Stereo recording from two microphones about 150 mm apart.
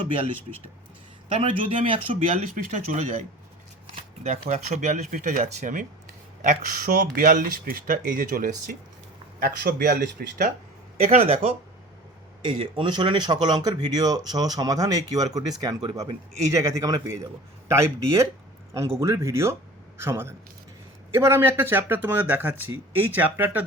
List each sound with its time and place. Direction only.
1.4 s speech: 35° right (ahead or behind)
2.7 s speech: 55° right (ahead or behind)
9.4 s speech: 85° right
11.0 s speech: 40° right (ahead or behind)
12.5 s speech: 35° right (ahead or behind); by 23.6 s 10° right (ahead or behind)